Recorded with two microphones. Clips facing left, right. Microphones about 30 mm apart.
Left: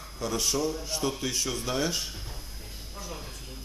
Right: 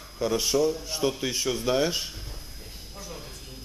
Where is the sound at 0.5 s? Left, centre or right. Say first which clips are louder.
Right 5 dB; centre.